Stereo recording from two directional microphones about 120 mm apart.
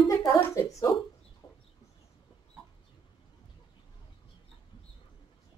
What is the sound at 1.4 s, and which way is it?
Chicken, 35° left (ahead or behind).